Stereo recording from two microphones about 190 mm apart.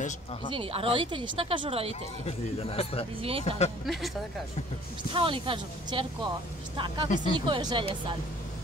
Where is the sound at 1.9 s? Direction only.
35° left (ahead or behind).